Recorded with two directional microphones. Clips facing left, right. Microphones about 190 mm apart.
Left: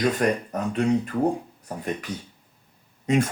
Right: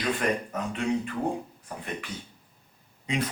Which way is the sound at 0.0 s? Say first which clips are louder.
Left 5 dB; 40° left (ahead or behind).